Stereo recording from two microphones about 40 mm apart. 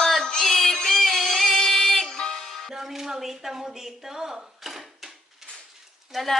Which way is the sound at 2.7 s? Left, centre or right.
Centre.